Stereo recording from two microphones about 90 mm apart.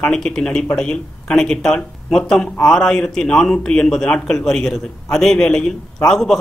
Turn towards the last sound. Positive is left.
turn(degrees=5)  # may be behind; listen again after turning